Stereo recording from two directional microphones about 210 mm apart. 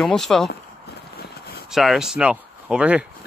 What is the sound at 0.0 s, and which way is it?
Speech, centre (ahead or behind).